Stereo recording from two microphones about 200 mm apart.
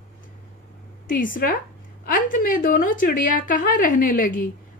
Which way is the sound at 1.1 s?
45° left (ahead or behind).